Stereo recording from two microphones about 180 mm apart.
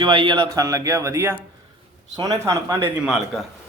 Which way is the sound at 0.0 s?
25° right (ahead or behind).